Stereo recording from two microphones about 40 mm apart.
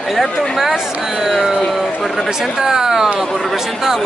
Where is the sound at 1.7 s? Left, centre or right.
Centre.